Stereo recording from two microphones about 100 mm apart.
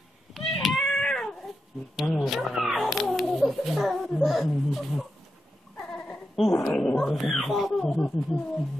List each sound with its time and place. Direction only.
0.3 s cat: centre (ahead or behind)
2.0 s speech: 5° left (ahead or behind)
5.8 s a sound: 10° left (ahead or behind)
6.3 s speech: centre (ahead or behind)